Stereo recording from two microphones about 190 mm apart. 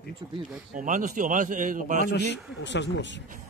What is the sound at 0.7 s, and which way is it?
A man's voice, 40° right (ahead or behind).